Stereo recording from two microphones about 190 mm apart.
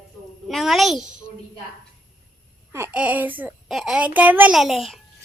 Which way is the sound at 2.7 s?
10° right (ahead or behind).